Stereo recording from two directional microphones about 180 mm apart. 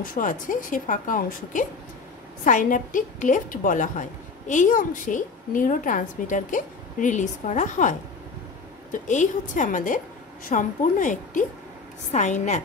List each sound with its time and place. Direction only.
0.1 s a woman's voice: 50° left (ahead or behind)
8.9 s a woman's voice: 45° left (ahead or behind)